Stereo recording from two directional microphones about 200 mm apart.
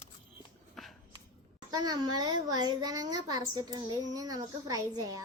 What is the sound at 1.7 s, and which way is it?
A child's voice, 20° right (ahead or behind).